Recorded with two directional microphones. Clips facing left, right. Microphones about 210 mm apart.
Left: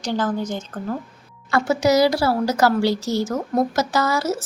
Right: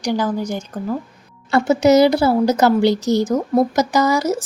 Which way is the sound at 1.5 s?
20° right (ahead or behind).